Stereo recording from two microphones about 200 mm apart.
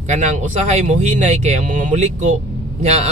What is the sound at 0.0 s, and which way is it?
Speech, 35° right (ahead or behind).